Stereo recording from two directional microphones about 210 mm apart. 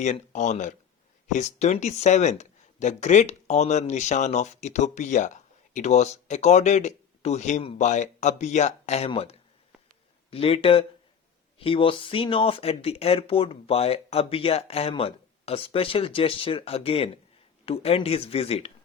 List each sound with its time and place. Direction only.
0.0 s speech: 35° left (ahead or behind)
10.3 s speech: 25° left (ahead or behind)